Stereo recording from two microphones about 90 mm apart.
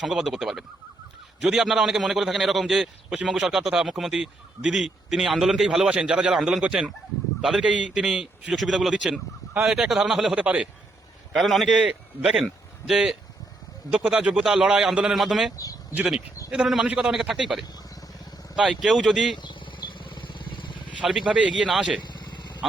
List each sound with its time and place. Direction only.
0.0 s speech: centre (ahead or behind)
11.3 s speech: centre (ahead or behind)
11.7 s speech: 10° right (ahead or behind)
18.5 s speech: 5° right (ahead or behind)
19.4 s vehicle: 60° left (ahead or behind)
21.0 s speech: 10° right (ahead or behind)
22.0 s vehicle: 55° left (ahead or behind)